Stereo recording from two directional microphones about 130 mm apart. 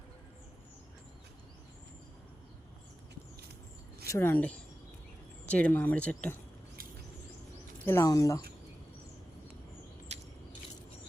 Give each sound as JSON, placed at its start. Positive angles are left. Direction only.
{"t": 4.1, "sound": "speech", "side_deg": 20}
{"t": 7.9, "sound": "speech", "side_deg": 25}
{"t": 10.1, "sound": "a sound", "side_deg": -60}